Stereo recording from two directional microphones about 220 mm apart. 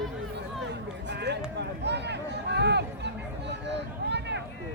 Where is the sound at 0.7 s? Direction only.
50° right (ahead or behind).